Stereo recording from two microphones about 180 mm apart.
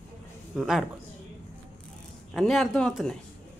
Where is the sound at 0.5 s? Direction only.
Centre (ahead or behind).